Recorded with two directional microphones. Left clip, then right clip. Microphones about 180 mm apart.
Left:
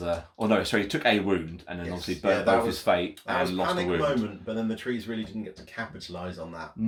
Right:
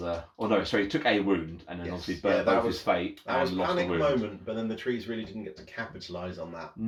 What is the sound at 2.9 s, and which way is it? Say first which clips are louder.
Speech: left 4 dB; 60° left (ahead or behind).